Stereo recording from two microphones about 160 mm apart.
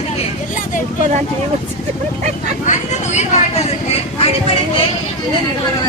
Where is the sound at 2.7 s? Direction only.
45° left (ahead or behind).